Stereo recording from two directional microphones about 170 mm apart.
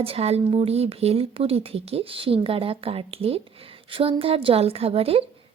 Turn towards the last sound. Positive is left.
turn(degrees=-35)  # may be behind; listen again after turning